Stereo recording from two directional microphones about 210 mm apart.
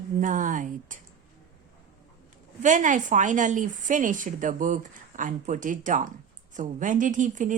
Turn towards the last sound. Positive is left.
turn(degrees=-35)  # may be behind; listen again after turning